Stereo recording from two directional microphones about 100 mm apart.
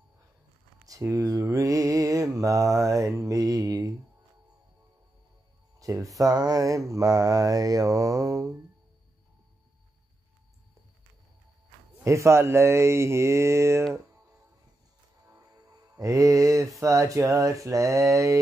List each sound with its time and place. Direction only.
0.8 s speech: 35° right (ahead or behind)
2.3 s mantra: 35° right (ahead or behind)
5.8 s a sound: 35° right (ahead or behind)
6.1 s mantra: 40° right (ahead or behind)
12.0 s speech: 30° right (ahead or behind)
15.3 s music: 35° right (ahead or behind)